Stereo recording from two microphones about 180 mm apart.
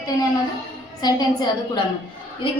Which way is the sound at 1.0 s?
25° left (ahead or behind).